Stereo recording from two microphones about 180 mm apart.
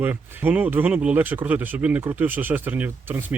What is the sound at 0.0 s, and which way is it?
Speech, 10° right (ahead or behind).